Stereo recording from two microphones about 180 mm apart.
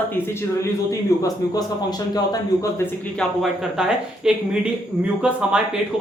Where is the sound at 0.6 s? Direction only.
20° left (ahead or behind).